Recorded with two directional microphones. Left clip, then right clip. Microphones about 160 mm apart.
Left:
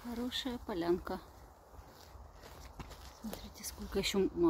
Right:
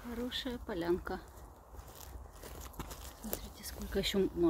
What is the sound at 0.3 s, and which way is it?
Speech, 15° left (ahead or behind).